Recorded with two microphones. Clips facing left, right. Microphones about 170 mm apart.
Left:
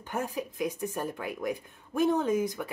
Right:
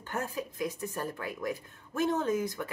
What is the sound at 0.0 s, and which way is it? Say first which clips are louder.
Speech: left 2 dB; 15° left (ahead or behind).